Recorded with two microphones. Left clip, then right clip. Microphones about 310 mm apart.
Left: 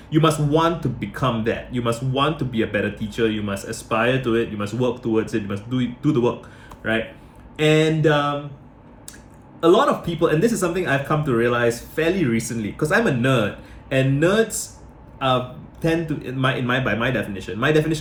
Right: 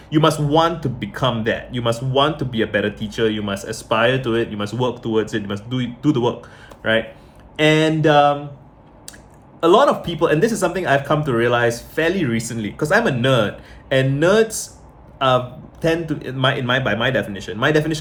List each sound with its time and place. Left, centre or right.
0.1 s speech: centre
7.5 s speech: centre
9.6 s speech: centre
15.8 s speech: centre